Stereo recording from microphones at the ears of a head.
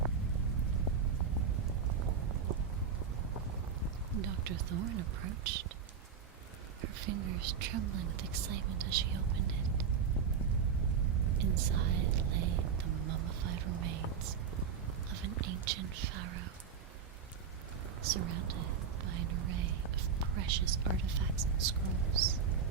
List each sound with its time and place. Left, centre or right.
1.5 s rain: right
4.1 s speech: right
6.8 s speech: right
10.9 s whispering: right
15.1 s speech: right
18.0 s speech: right